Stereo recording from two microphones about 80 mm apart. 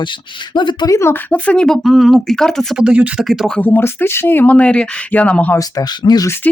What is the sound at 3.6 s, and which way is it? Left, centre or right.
Speech, left.